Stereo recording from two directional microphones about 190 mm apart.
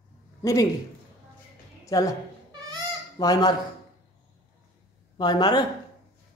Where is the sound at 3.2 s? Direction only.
20° left (ahead or behind).